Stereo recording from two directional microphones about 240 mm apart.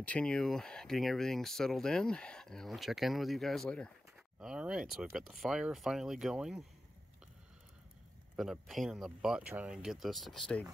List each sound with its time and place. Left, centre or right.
0.0 s speech: centre
8.4 s speech: centre